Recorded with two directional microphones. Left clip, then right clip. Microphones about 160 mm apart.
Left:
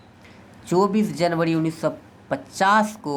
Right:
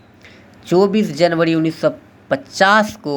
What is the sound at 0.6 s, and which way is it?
Speech, 15° right (ahead or behind).